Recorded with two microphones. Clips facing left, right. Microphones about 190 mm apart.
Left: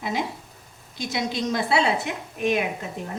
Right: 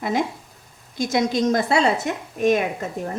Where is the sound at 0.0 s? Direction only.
50° right (ahead or behind).